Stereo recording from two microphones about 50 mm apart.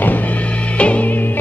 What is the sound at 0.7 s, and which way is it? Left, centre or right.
Music, left.